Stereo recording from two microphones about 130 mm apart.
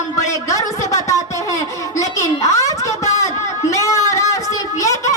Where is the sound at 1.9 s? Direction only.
25° left (ahead or behind).